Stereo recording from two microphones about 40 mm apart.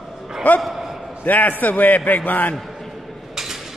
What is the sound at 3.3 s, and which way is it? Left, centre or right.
Cutlery, centre.